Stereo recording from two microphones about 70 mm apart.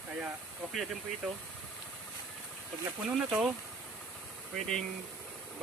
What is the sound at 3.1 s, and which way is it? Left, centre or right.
Speech, centre.